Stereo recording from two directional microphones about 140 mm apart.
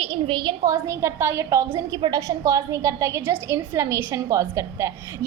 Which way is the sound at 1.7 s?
35° right (ahead or behind).